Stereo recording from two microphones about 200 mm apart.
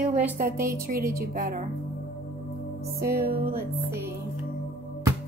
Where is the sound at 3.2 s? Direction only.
50° right (ahead or behind).